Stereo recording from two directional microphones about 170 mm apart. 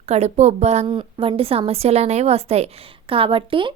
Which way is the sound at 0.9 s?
30° right (ahead or behind).